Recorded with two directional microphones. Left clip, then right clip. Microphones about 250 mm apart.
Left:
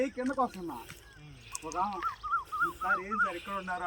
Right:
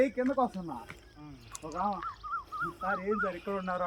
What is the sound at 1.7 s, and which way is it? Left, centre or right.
Speech, centre.